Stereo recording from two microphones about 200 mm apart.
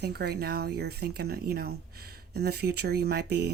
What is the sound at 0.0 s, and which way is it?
Speech, 55° right (ahead or behind).